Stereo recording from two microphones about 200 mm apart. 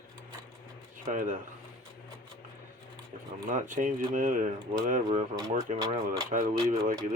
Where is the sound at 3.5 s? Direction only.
40° right (ahead or behind).